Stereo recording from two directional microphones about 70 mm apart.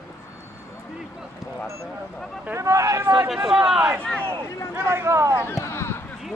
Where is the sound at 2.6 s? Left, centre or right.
Right.